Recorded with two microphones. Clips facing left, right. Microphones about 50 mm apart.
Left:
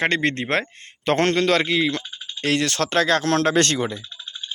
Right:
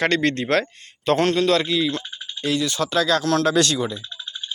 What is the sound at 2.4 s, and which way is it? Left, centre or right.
Speech, left.